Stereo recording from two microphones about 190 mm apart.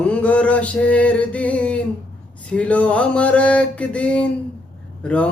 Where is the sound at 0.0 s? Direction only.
5° left (ahead or behind).